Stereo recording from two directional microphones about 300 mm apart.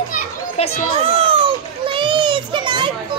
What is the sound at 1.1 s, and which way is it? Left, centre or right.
Children playing, centre.